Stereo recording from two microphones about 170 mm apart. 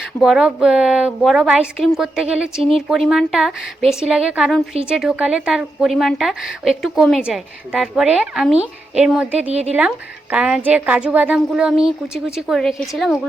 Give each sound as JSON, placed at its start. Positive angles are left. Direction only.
{"t": 0.2, "sound": "speech", "side_deg": -5}
{"t": 9.5, "sound": "speech", "side_deg": -40}
{"t": 10.3, "sound": "speech", "side_deg": -5}